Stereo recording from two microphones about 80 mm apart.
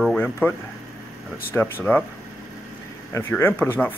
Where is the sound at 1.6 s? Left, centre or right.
Left.